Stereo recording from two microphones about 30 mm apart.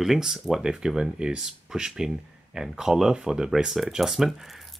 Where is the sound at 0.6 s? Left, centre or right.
Right.